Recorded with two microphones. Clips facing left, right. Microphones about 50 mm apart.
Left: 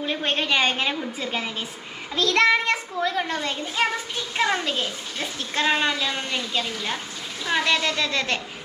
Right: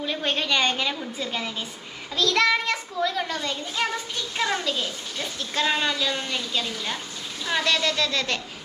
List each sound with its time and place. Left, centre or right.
0.1 s a woman's voice: centre